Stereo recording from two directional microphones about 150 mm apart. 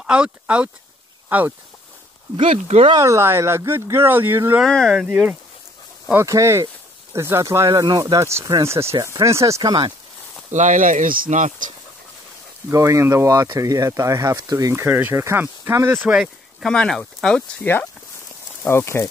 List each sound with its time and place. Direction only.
0.0 s speech: 5° right (ahead or behind)
2.3 s speech: 40° right (ahead or behind)
3.0 s speech: 20° right (ahead or behind)
4.6 s speech: 5° left (ahead or behind); by 9.9 s 30° right (ahead or behind)
10.5 s speech: 55° right (ahead or behind)
12.6 s speech: 20° right (ahead or behind); by 19.0 s 15° left (ahead or behind)